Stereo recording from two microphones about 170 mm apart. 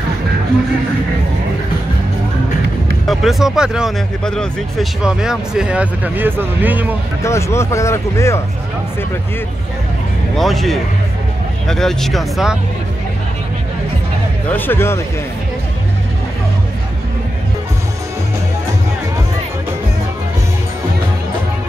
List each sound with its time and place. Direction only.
3.1 s speech: centre (ahead or behind)
7.2 s speech: 15° left (ahead or behind)
10.3 s speech: centre (ahead or behind)
14.5 s speech: 15° left (ahead or behind)